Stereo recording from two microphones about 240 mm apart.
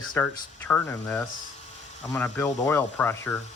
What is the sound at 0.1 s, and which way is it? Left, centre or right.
Speech, centre.